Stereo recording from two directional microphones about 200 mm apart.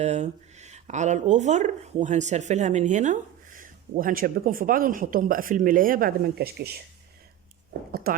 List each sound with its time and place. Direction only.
0.0 s speech: 35° right (ahead or behind); by 7.9 s 60° right (ahead or behind)